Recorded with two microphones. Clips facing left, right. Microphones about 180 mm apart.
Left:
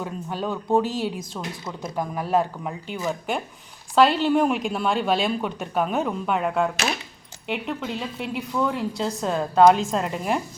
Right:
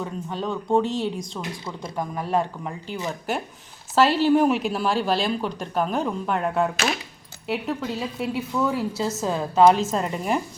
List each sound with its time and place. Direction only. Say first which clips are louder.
0.0 s a woman's voice: even; 5° left (ahead or behind)